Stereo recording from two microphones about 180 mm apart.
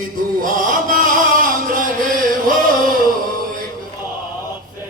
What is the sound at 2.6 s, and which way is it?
Music, 50° right (ahead or behind).